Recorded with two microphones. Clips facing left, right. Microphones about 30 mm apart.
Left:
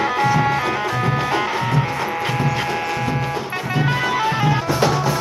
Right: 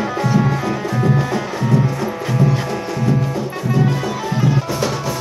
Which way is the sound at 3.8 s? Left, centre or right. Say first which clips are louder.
Left 2 dB; left.